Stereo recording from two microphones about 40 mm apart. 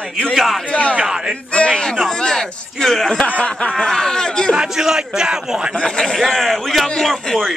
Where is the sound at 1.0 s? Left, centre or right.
Centre.